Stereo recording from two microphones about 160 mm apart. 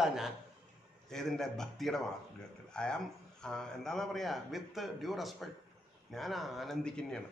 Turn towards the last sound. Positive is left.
turn(degrees=5)  # may be behind; listen again after turning